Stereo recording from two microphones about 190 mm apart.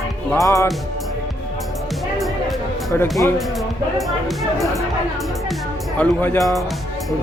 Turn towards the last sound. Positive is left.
turn(degrees=10)  # may be behind; listen again after turning